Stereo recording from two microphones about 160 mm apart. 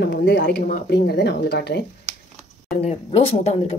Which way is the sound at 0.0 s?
90° left.